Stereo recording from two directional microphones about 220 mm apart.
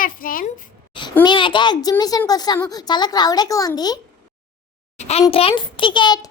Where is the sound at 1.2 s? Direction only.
20° left (ahead or behind).